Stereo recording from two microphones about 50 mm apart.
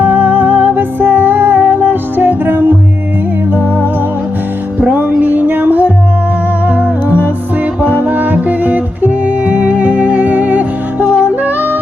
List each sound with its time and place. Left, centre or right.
0.0 s music: right
4.8 s music: right